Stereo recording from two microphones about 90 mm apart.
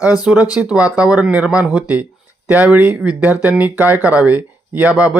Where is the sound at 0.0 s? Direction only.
10° right (ahead or behind).